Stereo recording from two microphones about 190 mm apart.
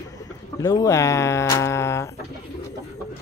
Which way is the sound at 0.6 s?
20° left (ahead or behind).